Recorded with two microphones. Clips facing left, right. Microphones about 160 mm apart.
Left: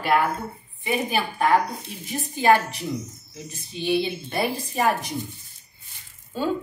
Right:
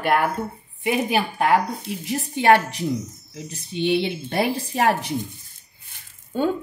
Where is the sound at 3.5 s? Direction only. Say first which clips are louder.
Right 3 dB; 65° right (ahead or behind).